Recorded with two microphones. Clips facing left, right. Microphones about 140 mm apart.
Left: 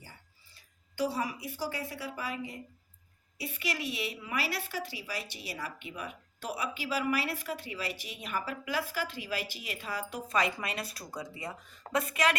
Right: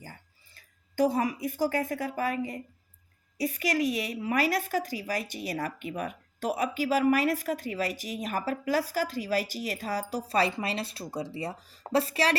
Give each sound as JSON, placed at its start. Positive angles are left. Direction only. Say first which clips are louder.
{"t": 0.0, "sound": "a woman's voice", "louder": "right 7 dB", "side_deg": -50}